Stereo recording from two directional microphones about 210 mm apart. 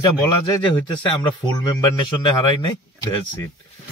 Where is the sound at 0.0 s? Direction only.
20° left (ahead or behind).